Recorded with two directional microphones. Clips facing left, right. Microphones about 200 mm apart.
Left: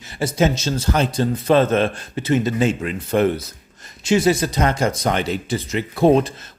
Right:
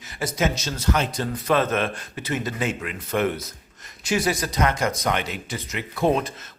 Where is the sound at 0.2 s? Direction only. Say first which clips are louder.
Left 6 dB; 30° left (ahead or behind).